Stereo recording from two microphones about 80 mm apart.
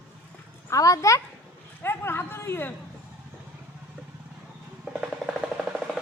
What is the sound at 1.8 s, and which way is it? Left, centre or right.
Speech, left.